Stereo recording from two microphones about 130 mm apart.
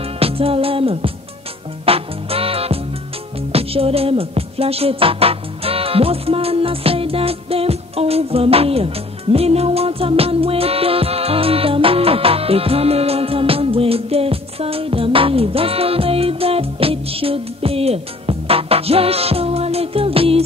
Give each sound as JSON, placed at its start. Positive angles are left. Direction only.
{"t": 0.2, "sound": "music", "side_deg": -45}